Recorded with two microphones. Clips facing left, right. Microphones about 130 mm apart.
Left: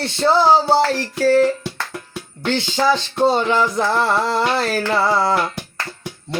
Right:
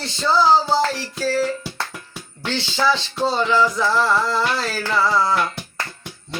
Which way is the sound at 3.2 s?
55° left (ahead or behind).